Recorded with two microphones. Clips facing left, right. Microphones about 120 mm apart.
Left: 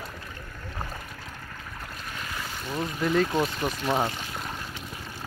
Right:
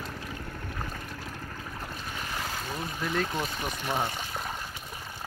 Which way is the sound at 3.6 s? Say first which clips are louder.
Left 5 dB; 40° left (ahead or behind).